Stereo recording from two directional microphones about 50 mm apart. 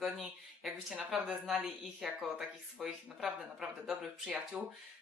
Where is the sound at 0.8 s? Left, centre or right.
Centre.